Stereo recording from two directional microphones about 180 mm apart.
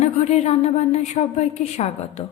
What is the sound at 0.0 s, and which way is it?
A woman's voice, 35° left (ahead or behind).